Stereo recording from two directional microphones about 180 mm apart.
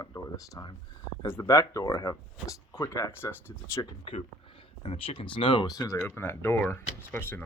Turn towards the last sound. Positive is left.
turn(degrees=10)  # may be behind; listen again after turning